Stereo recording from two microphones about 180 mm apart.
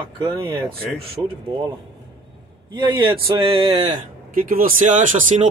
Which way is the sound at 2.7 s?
25° right (ahead or behind).